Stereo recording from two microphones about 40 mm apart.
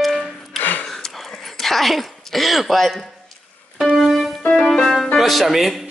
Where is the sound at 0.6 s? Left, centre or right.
Left.